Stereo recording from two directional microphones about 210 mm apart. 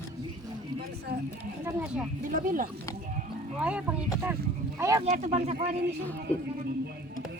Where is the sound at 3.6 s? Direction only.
5° right (ahead or behind).